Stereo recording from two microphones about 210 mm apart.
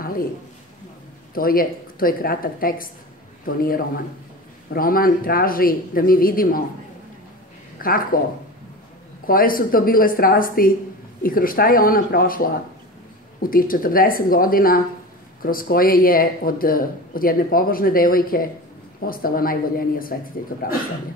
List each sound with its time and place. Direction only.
1.3 s speech: 45° left (ahead or behind)
7.8 s speech: 45° left (ahead or behind)
9.2 s speech: 45° left (ahead or behind)